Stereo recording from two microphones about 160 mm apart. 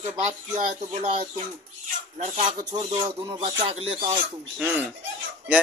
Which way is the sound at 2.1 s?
45° right (ahead or behind).